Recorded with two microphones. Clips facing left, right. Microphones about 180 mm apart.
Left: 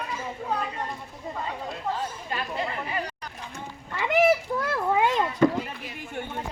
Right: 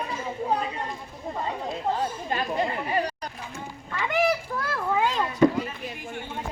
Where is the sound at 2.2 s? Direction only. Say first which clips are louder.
Right 5 dB; 35° right (ahead or behind).